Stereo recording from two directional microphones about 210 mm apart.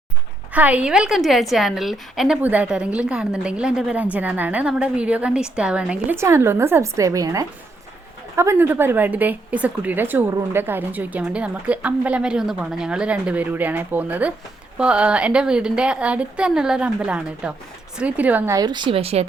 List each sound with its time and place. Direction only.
0.5 s a woman's voice: 5° right (ahead or behind); by 19.2 s 25° right (ahead or behind)